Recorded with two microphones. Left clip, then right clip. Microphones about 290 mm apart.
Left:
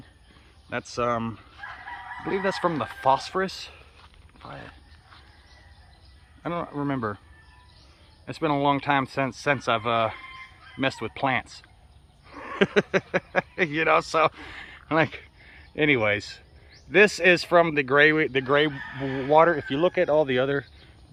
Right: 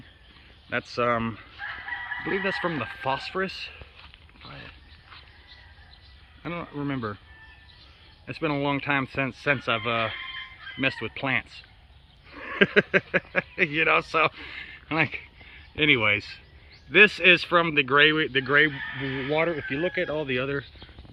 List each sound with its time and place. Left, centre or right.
0.9 s speech: centre
6.4 s speech: centre
8.3 s speech: centre
19.5 s speech: left
19.7 s speech: centre